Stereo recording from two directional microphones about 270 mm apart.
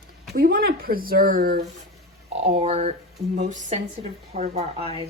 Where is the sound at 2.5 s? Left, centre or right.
Right.